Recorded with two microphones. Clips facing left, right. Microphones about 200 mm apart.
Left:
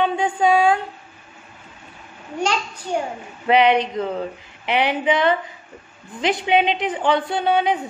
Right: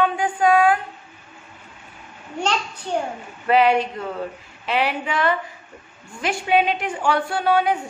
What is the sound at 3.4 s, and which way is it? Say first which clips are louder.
A woman's voice: left 1 dB; 20° left (ahead or behind).